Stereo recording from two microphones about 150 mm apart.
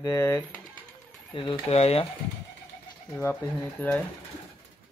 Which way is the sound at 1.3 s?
35° left (ahead or behind).